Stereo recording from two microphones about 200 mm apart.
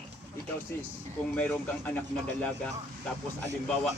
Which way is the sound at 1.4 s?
10° left (ahead or behind).